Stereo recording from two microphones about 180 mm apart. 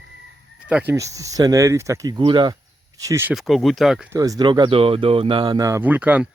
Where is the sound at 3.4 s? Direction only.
Centre (ahead or behind).